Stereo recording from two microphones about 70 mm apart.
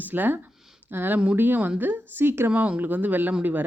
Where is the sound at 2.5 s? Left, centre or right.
Right.